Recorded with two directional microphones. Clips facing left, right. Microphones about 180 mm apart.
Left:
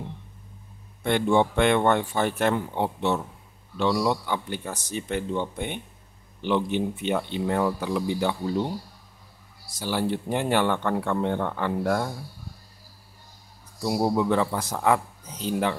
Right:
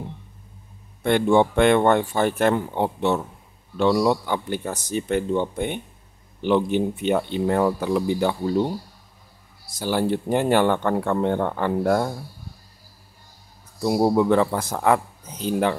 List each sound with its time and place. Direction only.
1.0 s speech: 50° right (ahead or behind)
9.8 s speech: 45° right (ahead or behind)
13.8 s speech: 50° right (ahead or behind)